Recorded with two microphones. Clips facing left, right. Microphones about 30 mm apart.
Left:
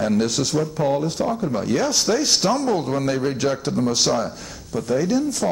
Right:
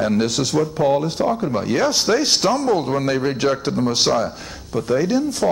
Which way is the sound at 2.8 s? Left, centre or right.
Centre.